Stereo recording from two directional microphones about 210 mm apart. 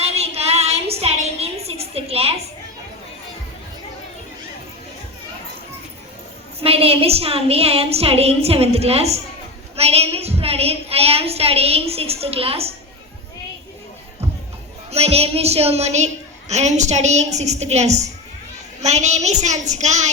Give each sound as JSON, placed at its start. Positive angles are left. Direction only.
{"t": 0.0, "sound": "a sound", "side_deg": -30}
{"t": 6.6, "sound": "a woman's voice", "side_deg": -30}
{"t": 14.8, "sound": "a woman's voice", "side_deg": -30}